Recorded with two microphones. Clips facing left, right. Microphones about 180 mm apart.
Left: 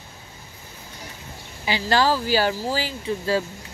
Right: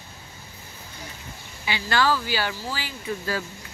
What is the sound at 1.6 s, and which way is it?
Speech, 35° left (ahead or behind).